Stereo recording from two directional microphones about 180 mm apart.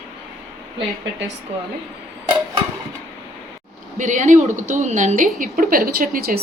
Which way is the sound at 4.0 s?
40° right (ahead or behind).